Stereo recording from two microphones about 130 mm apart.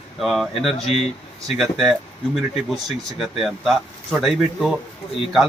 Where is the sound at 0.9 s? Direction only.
50° left (ahead or behind).